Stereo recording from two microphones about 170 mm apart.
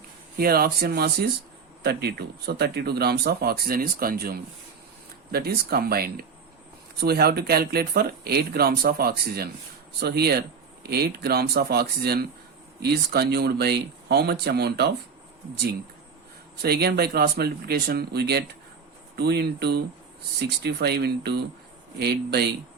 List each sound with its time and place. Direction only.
0.3 s speech: 60° right (ahead or behind)
16.6 s speech: 65° right (ahead or behind)